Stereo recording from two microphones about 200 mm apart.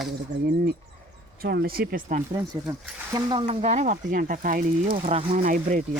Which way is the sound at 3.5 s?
35° right (ahead or behind).